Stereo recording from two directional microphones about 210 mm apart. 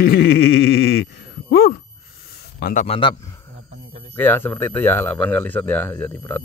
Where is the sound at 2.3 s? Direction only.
45° left (ahead or behind).